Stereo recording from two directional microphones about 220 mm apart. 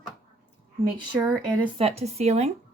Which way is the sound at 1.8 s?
30° right (ahead or behind).